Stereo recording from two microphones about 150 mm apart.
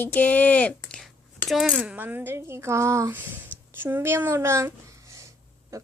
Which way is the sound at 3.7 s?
15° right (ahead or behind).